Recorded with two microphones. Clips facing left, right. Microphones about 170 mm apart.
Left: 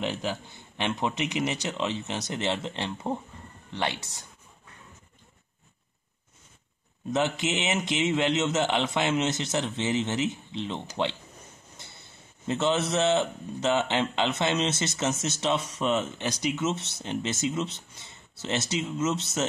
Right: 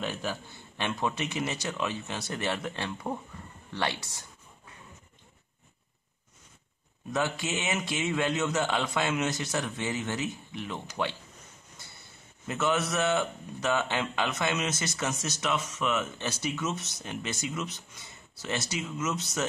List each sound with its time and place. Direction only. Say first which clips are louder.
0.0 s a man's voice: left 3 dB; 15° left (ahead or behind)
7.1 s a man's voice: left 4 dB; 20° left (ahead or behind)
12.4 s a man's voice: left 3 dB; 25° left (ahead or behind)
16.2 s a man's voice: left 4 dB; 15° left (ahead or behind)